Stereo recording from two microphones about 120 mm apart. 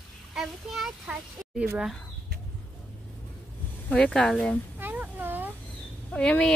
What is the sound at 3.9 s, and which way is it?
Speech, 5° left (ahead or behind).